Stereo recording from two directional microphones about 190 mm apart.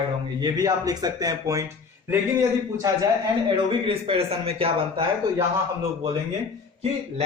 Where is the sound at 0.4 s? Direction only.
20° right (ahead or behind).